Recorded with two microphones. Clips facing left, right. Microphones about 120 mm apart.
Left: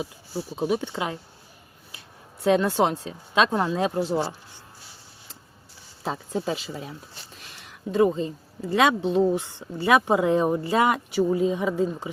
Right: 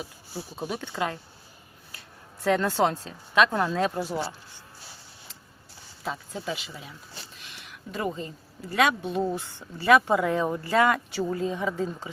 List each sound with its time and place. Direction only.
0.5 s speech: 20° left (ahead or behind)
2.4 s speech: 15° left (ahead or behind)
6.0 s speech: 35° left (ahead or behind)
7.4 s a sound: 40° left (ahead or behind)
7.9 s speech: 25° left (ahead or behind)